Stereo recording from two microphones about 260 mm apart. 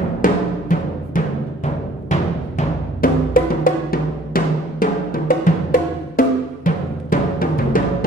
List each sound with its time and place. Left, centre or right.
0.2 s timpani: left